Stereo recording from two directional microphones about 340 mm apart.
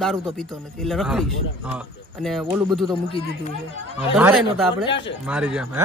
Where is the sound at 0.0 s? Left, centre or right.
Centre.